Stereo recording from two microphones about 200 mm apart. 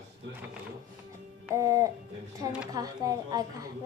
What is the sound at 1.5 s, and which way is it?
A woman's voice, 15° right (ahead or behind).